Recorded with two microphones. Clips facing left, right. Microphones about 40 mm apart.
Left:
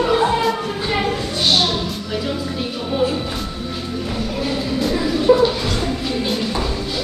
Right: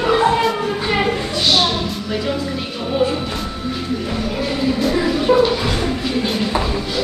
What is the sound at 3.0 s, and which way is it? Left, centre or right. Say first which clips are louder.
Music: right 1 dB; centre.